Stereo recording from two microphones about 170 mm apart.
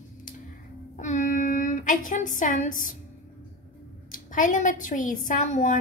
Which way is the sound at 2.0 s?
50° left (ahead or behind).